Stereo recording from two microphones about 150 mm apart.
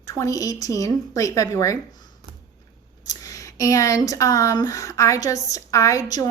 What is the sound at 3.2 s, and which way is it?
Speech, 20° left (ahead or behind).